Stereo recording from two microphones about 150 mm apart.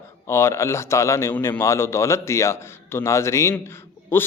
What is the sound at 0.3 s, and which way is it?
Speech, 15° left (ahead or behind).